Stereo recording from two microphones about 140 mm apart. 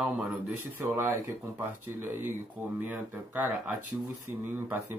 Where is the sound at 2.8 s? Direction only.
10° right (ahead or behind).